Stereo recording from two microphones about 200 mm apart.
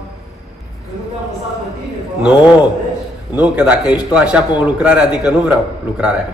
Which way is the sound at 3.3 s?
5° right (ahead or behind).